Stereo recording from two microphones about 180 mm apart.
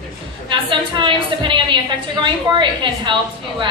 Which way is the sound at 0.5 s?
25° right (ahead or behind).